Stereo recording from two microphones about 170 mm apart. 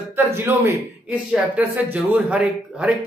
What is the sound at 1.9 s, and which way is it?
A man's voice, 10° right (ahead or behind).